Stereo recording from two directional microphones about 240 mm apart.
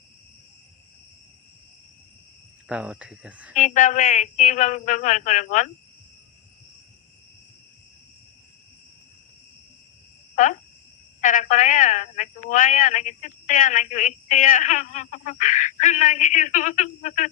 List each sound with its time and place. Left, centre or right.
2.6 s speech: centre
3.5 s a woman's voice: left
10.3 s a woman's voice: left